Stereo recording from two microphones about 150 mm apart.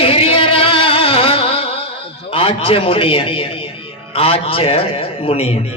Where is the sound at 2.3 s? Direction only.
35° left (ahead or behind).